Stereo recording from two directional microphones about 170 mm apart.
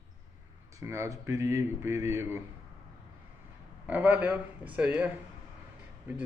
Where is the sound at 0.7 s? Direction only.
15° right (ahead or behind).